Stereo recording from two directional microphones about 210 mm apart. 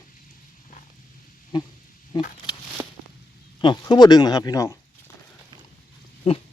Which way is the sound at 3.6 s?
20° left (ahead or behind).